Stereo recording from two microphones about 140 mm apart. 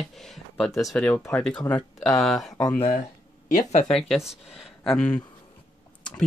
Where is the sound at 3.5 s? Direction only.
60° left (ahead or behind).